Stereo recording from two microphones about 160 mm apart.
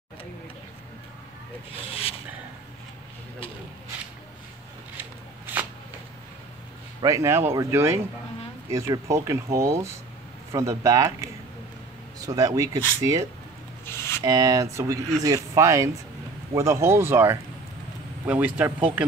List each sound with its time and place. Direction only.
1.7 s speech: 35° left (ahead or behind)
7.0 s speech: 20° right (ahead or behind)
13.8 s a sound: 15° left (ahead or behind)
14.2 s speech: 20° right (ahead or behind)